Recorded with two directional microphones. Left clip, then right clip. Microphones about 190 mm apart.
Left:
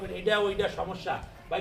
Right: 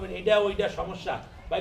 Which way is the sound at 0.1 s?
15° left (ahead or behind).